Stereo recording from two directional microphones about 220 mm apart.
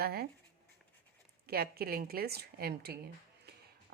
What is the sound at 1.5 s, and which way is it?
Speech, 45° right (ahead or behind).